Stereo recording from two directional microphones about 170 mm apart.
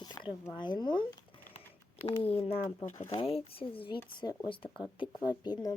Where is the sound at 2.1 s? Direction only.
35° left (ahead or behind).